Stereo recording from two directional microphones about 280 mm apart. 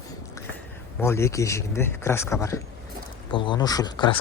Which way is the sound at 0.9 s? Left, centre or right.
Centre.